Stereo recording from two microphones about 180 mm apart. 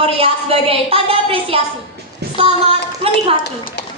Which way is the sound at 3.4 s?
70° left (ahead or behind).